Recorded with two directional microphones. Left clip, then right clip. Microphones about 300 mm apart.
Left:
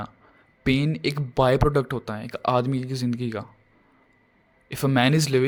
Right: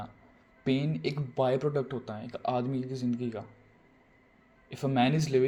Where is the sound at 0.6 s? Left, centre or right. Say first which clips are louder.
Left 7 dB; left.